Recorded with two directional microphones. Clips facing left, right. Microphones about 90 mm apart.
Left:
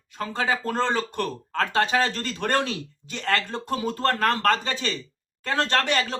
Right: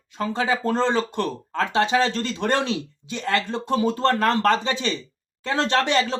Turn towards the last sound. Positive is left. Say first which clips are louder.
# right 3 dB
turn(degrees=-25)  # may be behind; listen again after turning